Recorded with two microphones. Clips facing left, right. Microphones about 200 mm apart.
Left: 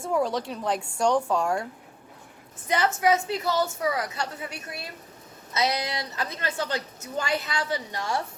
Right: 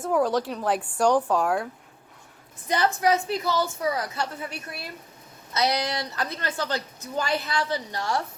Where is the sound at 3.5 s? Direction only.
20° left (ahead or behind).